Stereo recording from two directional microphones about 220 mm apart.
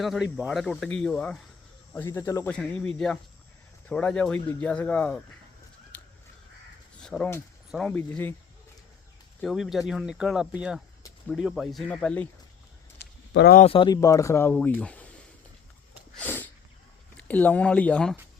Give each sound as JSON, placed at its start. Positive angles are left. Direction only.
{"t": 0.0, "sound": "speech", "side_deg": 0}
{"t": 5.9, "sound": "crow", "side_deg": 5}
{"t": 7.0, "sound": "speech", "side_deg": 5}
{"t": 9.4, "sound": "speech", "side_deg": 0}
{"t": 13.0, "sound": "a sound", "side_deg": 50}
{"t": 13.6, "sound": "speech", "side_deg": 25}
{"t": 16.1, "sound": "a sound", "side_deg": 5}
{"t": 17.2, "sound": "speech", "side_deg": 5}